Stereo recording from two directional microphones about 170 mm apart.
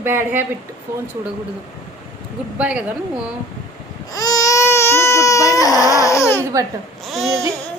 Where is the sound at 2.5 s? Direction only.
10° right (ahead or behind).